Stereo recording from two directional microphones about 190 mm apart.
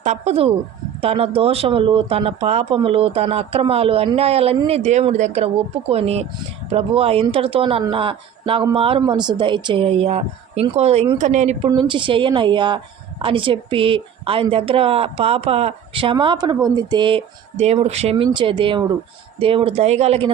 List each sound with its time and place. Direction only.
0.0 s speech: 35° right (ahead or behind)
11.7 s speech: 25° right (ahead or behind)